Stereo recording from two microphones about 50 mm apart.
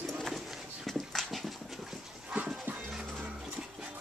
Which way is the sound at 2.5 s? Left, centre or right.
Centre.